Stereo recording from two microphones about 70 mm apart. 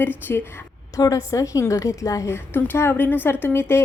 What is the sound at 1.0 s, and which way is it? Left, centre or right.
A woman's voice, left.